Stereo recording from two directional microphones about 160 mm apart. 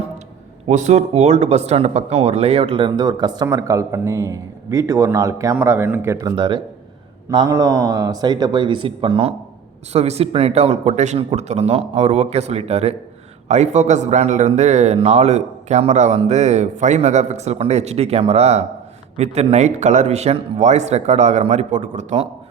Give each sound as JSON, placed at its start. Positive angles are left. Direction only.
{"t": 0.7, "sound": "speech", "side_deg": -50}
{"t": 6.3, "sound": "a man's voice", "side_deg": -30}